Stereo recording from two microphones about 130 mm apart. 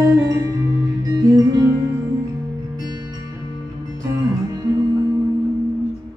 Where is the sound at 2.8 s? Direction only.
30° right (ahead or behind).